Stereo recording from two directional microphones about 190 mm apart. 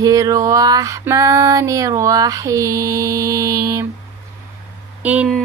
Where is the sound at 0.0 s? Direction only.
20° right (ahead or behind).